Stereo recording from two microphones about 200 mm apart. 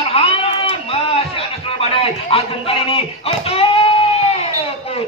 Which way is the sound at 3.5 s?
30° left (ahead or behind).